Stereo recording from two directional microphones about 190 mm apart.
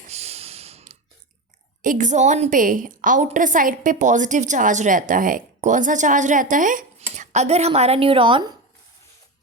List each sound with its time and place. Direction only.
0.1 s snort: 35° right (ahead or behind)
1.8 s a woman's voice: 45° right (ahead or behind); by 8.5 s 25° right (ahead or behind)